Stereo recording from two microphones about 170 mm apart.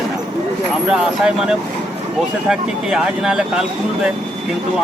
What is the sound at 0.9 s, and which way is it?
Speech, 5° right (ahead or behind).